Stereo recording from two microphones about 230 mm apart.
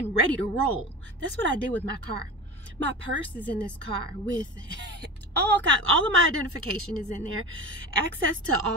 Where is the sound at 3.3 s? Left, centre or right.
Centre.